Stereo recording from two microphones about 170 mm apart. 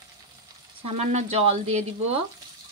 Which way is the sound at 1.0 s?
40° right (ahead or behind).